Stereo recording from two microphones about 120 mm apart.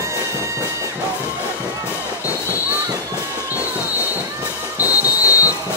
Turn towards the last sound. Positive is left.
turn(degrees=30)  # may be behind; listen again after turning